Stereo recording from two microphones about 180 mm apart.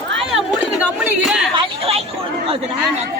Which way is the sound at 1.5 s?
30° right (ahead or behind).